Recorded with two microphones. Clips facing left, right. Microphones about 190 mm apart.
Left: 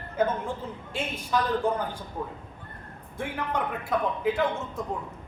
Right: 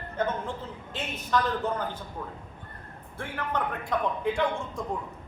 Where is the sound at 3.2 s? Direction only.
15° left (ahead or behind).